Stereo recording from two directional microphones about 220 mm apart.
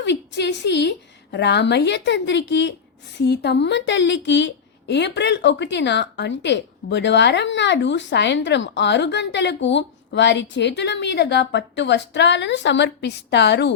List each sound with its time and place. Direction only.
0.0 s a woman's voice: 50° left (ahead or behind)